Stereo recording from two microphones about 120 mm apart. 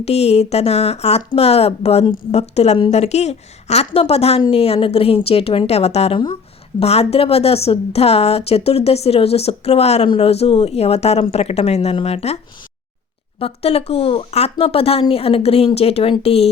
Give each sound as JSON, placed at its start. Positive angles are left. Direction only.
{"t": 0.0, "sound": "a woman's voice", "side_deg": 60}
{"t": 13.4, "sound": "a woman's voice", "side_deg": 55}